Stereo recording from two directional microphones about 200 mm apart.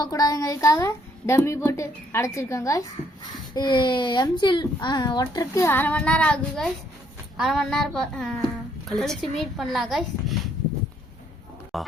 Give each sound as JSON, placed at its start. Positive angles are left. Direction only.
{"t": 0.0, "sound": "a woman's voice", "side_deg": 15}
{"t": 11.7, "sound": "speech", "side_deg": 0}